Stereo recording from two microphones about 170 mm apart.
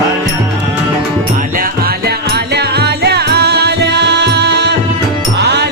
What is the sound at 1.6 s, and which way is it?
Music, 65° right (ahead or behind).